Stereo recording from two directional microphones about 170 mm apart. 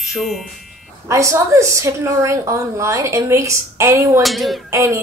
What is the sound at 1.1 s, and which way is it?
A woman's voice, 20° right (ahead or behind).